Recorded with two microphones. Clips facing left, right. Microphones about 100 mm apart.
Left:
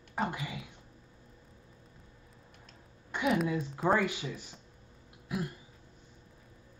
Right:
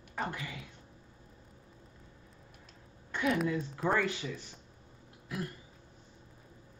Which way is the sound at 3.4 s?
20° left (ahead or behind).